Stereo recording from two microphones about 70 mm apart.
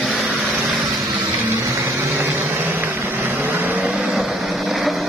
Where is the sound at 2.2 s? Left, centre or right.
Right.